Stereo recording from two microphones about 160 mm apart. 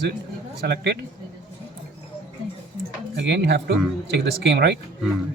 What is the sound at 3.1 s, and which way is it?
Speech, 90° right.